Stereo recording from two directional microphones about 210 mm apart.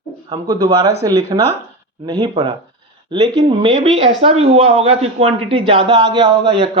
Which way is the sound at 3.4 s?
25° right (ahead or behind).